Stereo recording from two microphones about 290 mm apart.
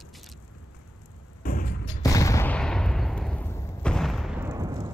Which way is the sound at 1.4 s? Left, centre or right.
Left.